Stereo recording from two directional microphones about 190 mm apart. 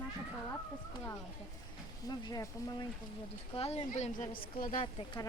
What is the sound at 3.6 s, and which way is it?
A woman's voice, 35° left (ahead or behind).